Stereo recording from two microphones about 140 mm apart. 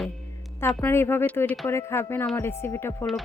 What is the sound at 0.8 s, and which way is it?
Speech, 15° left (ahead or behind).